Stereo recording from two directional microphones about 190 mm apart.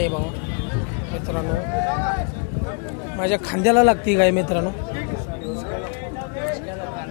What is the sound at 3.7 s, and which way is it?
Speech, 30° left (ahead or behind).